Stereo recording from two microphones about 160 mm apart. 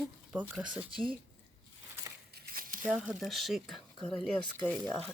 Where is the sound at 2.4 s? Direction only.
60° right (ahead or behind).